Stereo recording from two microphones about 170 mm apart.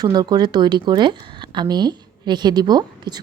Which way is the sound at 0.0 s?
25° right (ahead or behind).